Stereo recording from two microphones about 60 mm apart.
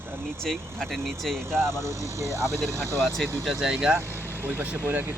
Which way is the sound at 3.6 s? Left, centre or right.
Centre.